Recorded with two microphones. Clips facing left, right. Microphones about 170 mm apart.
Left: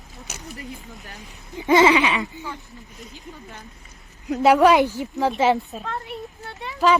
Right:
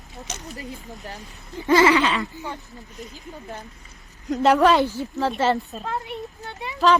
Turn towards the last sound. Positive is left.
turn(degrees=0)  # may be behind; listen again after turning